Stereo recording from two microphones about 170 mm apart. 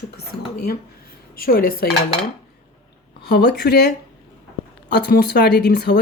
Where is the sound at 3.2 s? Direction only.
75° left (ahead or behind).